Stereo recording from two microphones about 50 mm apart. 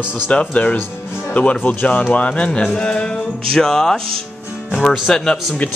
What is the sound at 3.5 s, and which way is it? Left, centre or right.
Speech, centre.